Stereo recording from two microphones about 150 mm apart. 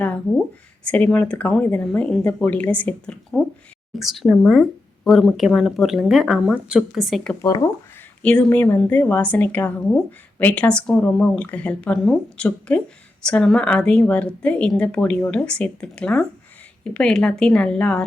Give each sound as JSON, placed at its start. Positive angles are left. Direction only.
{"t": 0.0, "sound": "a sound", "side_deg": 10}
{"t": 0.9, "sound": "a woman's voice", "side_deg": 10}
{"t": 7.4, "sound": "speech", "side_deg": 25}
{"t": 8.2, "sound": "a woman's voice", "side_deg": 5}